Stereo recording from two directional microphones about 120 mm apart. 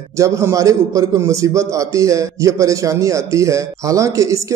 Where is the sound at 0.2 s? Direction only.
25° right (ahead or behind).